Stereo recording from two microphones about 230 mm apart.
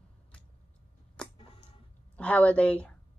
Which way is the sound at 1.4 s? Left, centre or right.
Left.